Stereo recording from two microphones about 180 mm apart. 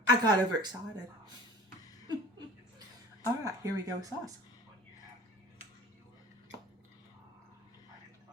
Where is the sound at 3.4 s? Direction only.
20° right (ahead or behind).